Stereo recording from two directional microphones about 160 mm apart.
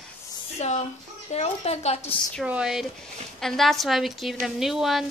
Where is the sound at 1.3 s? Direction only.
40° left (ahead or behind).